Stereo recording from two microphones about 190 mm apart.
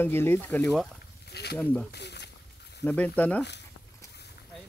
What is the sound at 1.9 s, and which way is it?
Snake, 60° left (ahead or behind).